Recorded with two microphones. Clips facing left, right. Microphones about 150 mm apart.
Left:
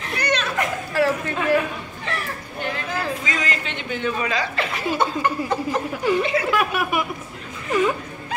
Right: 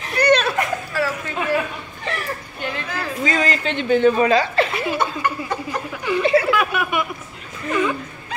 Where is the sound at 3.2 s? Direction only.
35° right (ahead or behind).